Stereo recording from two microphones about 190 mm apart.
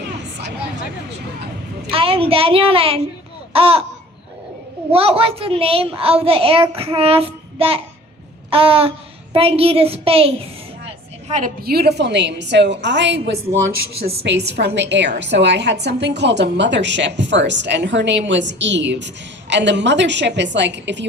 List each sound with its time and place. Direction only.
1.9 s a woman's voice: 30° right (ahead or behind)
4.9 s a child's voice: 30° right (ahead or behind)
11.3 s a woman's voice: 40° right (ahead or behind); by 13.6 s 75° right (ahead or behind)
14.3 s a woman's voice: 65° right (ahead or behind)